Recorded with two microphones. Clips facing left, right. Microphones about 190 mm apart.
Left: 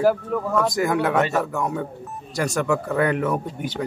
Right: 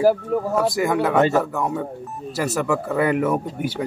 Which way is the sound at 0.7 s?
Centre (ahead or behind).